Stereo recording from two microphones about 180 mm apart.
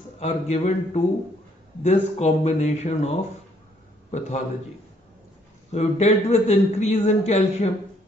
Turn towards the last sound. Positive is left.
turn(degrees=40)  # may be behind; listen again after turning